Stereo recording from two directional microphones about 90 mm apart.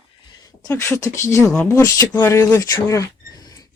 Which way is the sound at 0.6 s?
35° left (ahead or behind).